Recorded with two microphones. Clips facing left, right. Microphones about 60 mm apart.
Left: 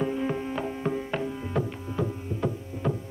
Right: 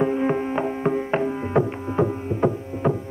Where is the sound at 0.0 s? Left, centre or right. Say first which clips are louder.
Right 7 dB; right.